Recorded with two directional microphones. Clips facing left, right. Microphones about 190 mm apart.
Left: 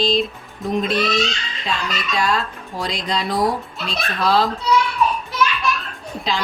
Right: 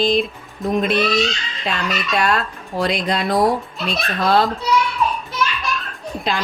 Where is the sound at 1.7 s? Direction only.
60° right (ahead or behind).